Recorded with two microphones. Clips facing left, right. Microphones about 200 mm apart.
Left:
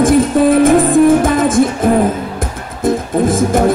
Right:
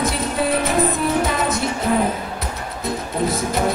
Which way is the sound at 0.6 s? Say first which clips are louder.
Left 11 dB; 50° left (ahead or behind).